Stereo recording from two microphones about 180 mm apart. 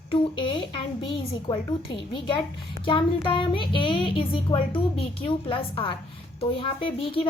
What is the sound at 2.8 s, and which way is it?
A woman's voice, 30° left (ahead or behind).